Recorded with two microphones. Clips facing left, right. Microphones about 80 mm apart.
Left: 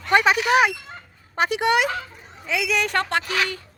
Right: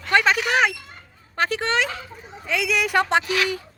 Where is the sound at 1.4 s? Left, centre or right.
Centre.